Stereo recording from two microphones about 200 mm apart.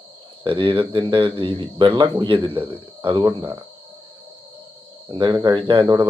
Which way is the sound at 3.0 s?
25° right (ahead or behind).